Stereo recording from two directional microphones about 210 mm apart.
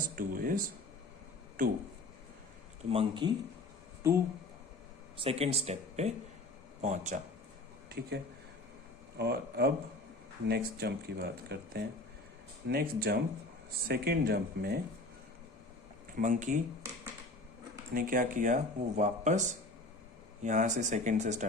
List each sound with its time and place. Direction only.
0.2 s speech: 40° right (ahead or behind)
2.9 s speech: 25° right (ahead or behind)
4.0 s speech: 15° right (ahead or behind)
5.1 s speech: 25° right (ahead or behind)
7.9 s speech: 50° right (ahead or behind)
16.1 s speech: 40° right (ahead or behind)
17.9 s speech: 40° right (ahead or behind)
20.4 s speech: 35° right (ahead or behind)